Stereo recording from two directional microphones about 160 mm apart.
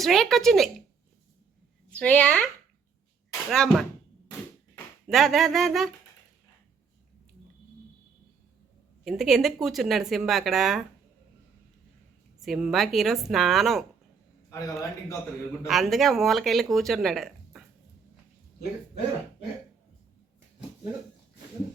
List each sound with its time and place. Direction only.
0.0 s speech: centre (ahead or behind)
1.9 s a woman's voice: 10° left (ahead or behind)
3.5 s speech: 5° left (ahead or behind)
4.3 s a sound: 25° left (ahead or behind)
5.1 s speech: centre (ahead or behind)
9.0 s speech: centre (ahead or behind)
12.4 s speech: centre (ahead or behind)
14.5 s a man's voice: 20° left (ahead or behind)
15.6 s speech: centre (ahead or behind)